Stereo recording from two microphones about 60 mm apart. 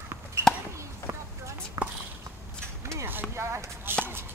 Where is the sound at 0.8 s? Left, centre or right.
Right.